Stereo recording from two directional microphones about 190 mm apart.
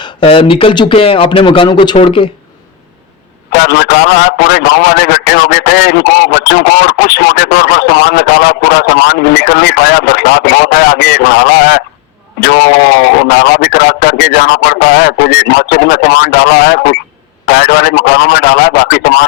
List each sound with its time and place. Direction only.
0.0 s speech: 30° left (ahead or behind)
3.6 s a man's voice: 60° left (ahead or behind)